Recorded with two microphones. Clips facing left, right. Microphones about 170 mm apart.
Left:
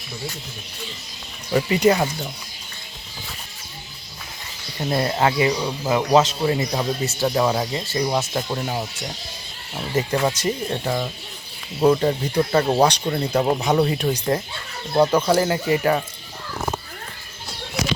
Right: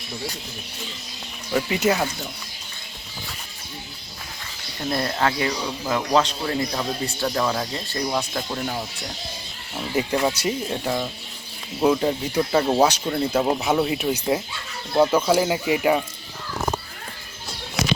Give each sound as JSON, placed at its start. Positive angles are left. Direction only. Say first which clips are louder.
{"t": 1.7, "sound": "speech", "louder": "left 5 dB", "side_deg": -5}
{"t": 4.8, "sound": "speech", "louder": "left 3 dB", "side_deg": 15}
{"t": 9.9, "sound": "speech", "louder": "left 1 dB", "side_deg": -10}